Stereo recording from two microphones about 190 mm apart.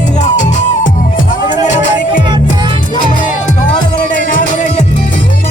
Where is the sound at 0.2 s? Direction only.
40° left (ahead or behind).